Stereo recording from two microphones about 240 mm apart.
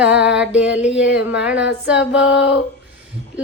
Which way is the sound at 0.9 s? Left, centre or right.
Left.